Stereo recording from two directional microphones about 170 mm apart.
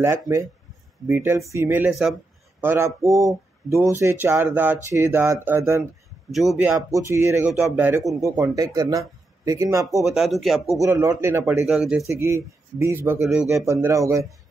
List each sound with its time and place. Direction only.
0.0 s speech: 15° right (ahead or behind)
2.6 s speech: 15° right (ahead or behind)
6.3 s speech: centre (ahead or behind)
6.9 s speech: 15° right (ahead or behind)
10.0 s speech: centre (ahead or behind)
10.8 s speech: 15° right (ahead or behind)
11.6 s speech: 5° right (ahead or behind)
12.1 s speech: 15° right (ahead or behind)